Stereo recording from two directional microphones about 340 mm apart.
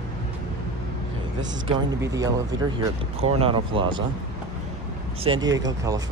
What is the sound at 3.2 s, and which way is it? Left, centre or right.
Speech, centre.